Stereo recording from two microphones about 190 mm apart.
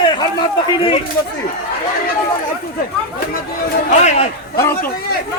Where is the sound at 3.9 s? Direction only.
35° left (ahead or behind).